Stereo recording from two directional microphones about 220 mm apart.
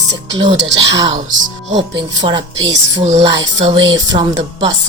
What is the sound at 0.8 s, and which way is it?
A woman's voice, 20° right (ahead or behind).